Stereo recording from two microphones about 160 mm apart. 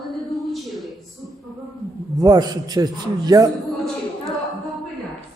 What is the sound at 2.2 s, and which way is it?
A man's voice, 25° right (ahead or behind).